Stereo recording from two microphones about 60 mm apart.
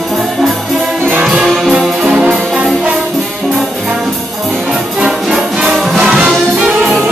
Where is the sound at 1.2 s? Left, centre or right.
Centre.